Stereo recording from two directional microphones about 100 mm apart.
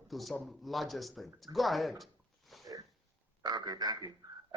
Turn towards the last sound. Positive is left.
turn(degrees=-40)  # may be behind; listen again after turning